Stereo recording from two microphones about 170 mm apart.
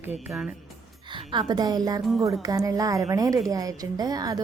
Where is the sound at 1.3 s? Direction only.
25° right (ahead or behind).